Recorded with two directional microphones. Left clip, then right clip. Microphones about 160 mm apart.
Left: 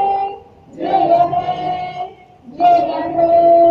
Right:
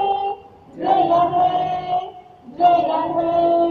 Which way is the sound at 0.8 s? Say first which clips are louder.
Left 3 dB; 60° left (ahead or behind).